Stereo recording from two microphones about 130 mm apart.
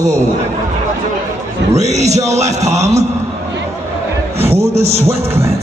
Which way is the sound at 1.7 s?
60° right (ahead or behind).